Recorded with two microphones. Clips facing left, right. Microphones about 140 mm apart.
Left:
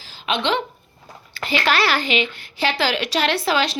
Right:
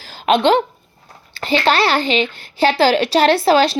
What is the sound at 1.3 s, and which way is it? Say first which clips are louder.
A woman's voice: right 5 dB; 30° right (ahead or behind).